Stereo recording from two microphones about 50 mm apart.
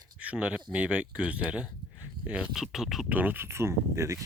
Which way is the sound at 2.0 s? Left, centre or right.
Right.